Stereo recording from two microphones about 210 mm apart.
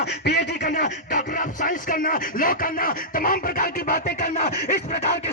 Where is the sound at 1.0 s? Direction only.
40° left (ahead or behind).